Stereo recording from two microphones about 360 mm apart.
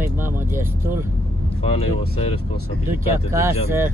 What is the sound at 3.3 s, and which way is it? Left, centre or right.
Speech, centre.